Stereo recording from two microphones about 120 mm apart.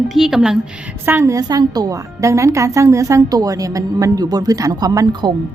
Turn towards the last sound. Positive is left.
turn(degrees=-35)  # may be behind; listen again after turning